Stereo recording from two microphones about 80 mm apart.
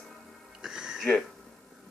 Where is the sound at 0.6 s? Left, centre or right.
Centre.